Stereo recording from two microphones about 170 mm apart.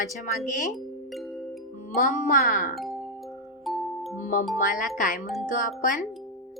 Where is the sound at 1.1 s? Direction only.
Centre (ahead or behind).